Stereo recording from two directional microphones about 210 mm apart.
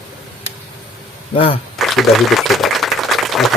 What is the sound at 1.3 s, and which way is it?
Speech, 25° left (ahead or behind).